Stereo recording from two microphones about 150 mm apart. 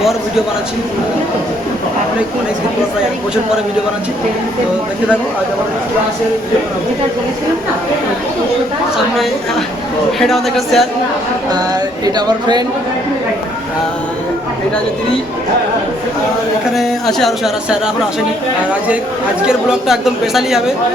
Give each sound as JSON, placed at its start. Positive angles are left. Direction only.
{"t": 10.2, "sound": "speech", "side_deg": 0}
{"t": 11.5, "sound": "a sound", "side_deg": -25}
{"t": 16.7, "sound": "speech", "side_deg": 0}
{"t": 19.4, "sound": "speech", "side_deg": -5}